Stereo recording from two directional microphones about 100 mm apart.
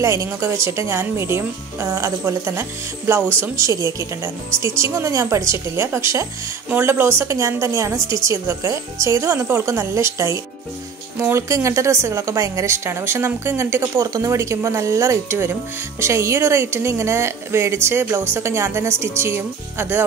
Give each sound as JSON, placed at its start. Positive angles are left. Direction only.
{"t": 0.0, "sound": "a woman's voice", "side_deg": -30}